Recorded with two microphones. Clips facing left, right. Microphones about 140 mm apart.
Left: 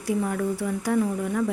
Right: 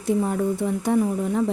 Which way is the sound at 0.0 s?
20° right (ahead or behind).